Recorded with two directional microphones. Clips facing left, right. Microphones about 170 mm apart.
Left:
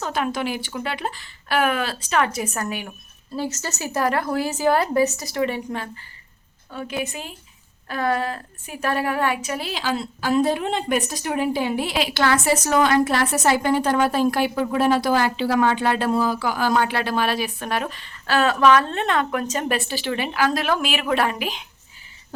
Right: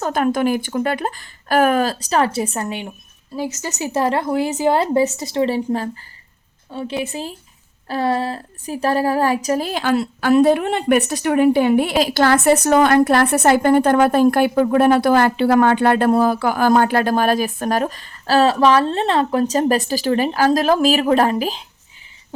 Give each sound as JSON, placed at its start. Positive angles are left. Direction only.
{"t": 0.0, "sound": "a woman's voice", "side_deg": -45}
{"t": 3.3, "sound": "a woman's voice", "side_deg": -15}
{"t": 11.9, "sound": "a woman's voice", "side_deg": -40}